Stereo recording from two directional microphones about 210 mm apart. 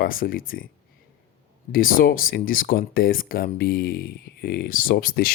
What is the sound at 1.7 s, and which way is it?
Speech, 45° left (ahead or behind).